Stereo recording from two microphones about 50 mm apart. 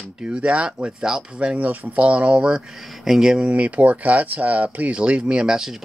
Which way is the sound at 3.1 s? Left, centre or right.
Centre.